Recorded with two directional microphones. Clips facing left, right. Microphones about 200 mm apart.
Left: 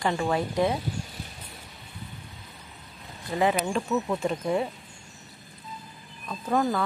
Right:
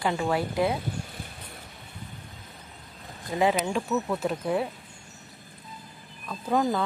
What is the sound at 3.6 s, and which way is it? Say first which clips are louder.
Speech: even; 5° right (ahead or behind).